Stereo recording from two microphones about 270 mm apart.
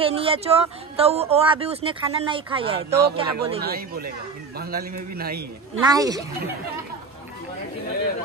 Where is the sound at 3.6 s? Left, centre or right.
Right.